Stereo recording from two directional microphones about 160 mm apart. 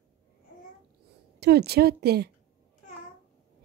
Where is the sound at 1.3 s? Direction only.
90° right.